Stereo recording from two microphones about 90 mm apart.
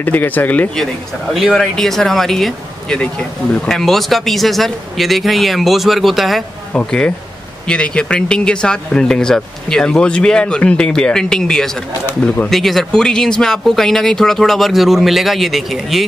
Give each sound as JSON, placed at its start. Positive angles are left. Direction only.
{"t": 0.0, "sound": "speech", "side_deg": 20}
{"t": 1.3, "sound": "speech", "side_deg": 5}
{"t": 6.7, "sound": "speech", "side_deg": 10}